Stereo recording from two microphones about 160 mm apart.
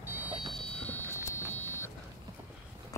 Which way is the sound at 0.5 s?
10° left (ahead or behind).